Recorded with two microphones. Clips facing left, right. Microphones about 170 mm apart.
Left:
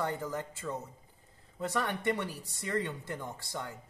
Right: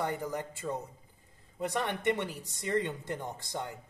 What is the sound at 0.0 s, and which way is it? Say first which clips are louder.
Speech: right 1 dB; 15° right (ahead or behind).